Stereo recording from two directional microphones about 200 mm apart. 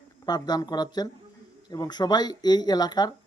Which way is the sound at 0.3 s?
20° left (ahead or behind).